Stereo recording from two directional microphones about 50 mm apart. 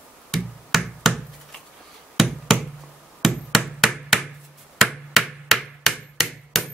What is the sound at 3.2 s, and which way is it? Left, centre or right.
Hammer, centre.